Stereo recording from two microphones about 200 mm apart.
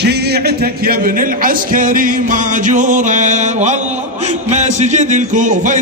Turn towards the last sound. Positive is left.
turn(degrees=-40)  # may be behind; listen again after turning